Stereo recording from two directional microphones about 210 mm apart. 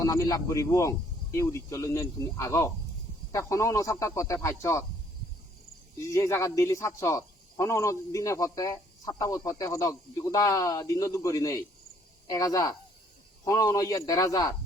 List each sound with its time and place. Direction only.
0.0 s speech: 15° left (ahead or behind)
6.0 s speech: 15° left (ahead or behind)